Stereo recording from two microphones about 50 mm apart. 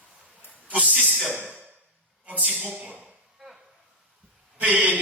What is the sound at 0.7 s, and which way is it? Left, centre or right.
A man's voice, right.